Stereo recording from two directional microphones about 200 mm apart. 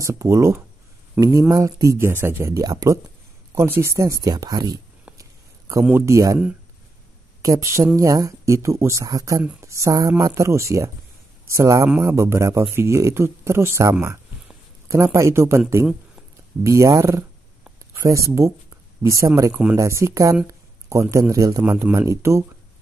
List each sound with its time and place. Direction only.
0.0 s speech: 15° right (ahead or behind)
7.4 s speech: 15° right (ahead or behind)
16.6 s speech: 15° right (ahead or behind)
17.6 s a sound: 15° right (ahead or behind)
19.0 s speech: 15° right (ahead or behind)